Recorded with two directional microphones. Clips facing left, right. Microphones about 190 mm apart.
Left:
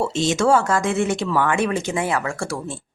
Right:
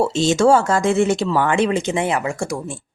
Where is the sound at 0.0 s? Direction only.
30° right (ahead or behind); by 2.8 s 15° right (ahead or behind).